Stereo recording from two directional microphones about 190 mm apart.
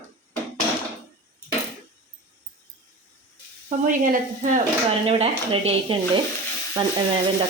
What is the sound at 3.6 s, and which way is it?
Speech, 45° right (ahead or behind).